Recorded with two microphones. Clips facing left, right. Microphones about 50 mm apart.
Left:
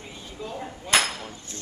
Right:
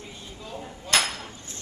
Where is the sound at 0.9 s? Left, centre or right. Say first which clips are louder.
Left 2 dB; centre.